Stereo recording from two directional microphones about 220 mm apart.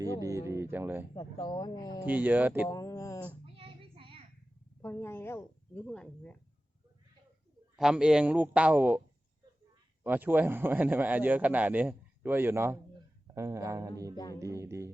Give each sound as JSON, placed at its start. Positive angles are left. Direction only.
{"t": 0.0, "sound": "a man's voice", "side_deg": -15}
{"t": 1.1, "sound": "speech", "side_deg": 20}
{"t": 2.0, "sound": "a man's voice", "side_deg": -10}
{"t": 2.6, "sound": "mantra", "side_deg": 15}
{"t": 3.4, "sound": "child singing", "side_deg": -25}
{"t": 4.8, "sound": "speech", "side_deg": 10}
{"t": 7.8, "sound": "a man's voice", "side_deg": -5}
{"t": 10.0, "sound": "a man's voice", "side_deg": -10}